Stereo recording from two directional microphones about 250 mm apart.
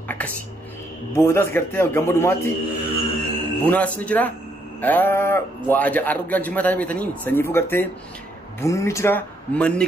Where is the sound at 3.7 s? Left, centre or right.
Centre.